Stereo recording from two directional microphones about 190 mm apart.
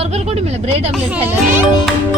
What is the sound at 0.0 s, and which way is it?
Speech, 35° right (ahead or behind).